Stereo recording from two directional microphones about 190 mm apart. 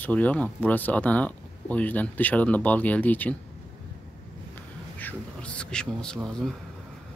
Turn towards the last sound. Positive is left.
turn(degrees=5)  # may be behind; listen again after turning